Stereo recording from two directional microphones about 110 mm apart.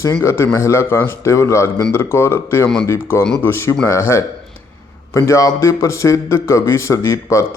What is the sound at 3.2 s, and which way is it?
Speech, 5° left (ahead or behind).